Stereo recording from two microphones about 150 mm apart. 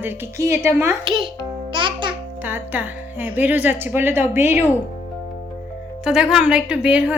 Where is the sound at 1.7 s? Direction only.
35° right (ahead or behind).